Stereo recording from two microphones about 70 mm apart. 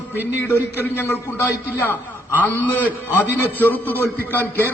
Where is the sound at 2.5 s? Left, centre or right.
Left.